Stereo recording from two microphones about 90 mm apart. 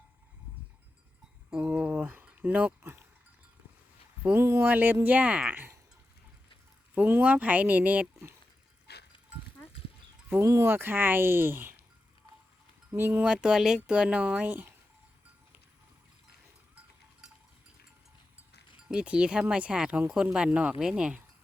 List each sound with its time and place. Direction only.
1.5 s a sound: 15° right (ahead or behind)
4.4 s speech: 25° right (ahead or behind)
6.9 s speech: 20° right (ahead or behind)
10.4 s speech: 30° right (ahead or behind)
12.9 s speech: 25° right (ahead or behind)
13.2 s speech: 10° right (ahead or behind)
16.7 s cowbell: 5° right (ahead or behind)
18.9 s speech: 10° right (ahead or behind)